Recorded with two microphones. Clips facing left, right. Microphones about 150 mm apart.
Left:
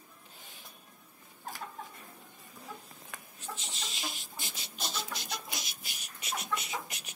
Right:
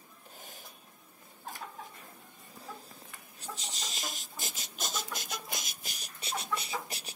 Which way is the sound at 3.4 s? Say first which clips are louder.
Right 1 dB; 35° right (ahead or behind).